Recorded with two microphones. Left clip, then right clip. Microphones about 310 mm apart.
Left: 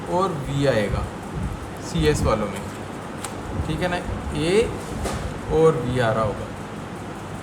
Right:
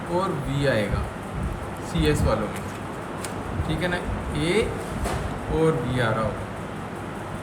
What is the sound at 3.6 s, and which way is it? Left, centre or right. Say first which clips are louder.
Speech: left 2 dB; centre.